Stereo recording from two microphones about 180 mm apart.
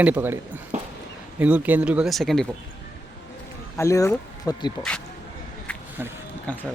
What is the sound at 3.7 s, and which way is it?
Speech, 15° left (ahead or behind).